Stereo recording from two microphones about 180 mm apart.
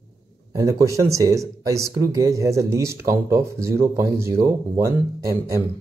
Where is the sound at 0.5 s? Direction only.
20° right (ahead or behind).